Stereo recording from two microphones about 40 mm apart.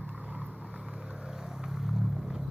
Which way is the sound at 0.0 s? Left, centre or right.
Right.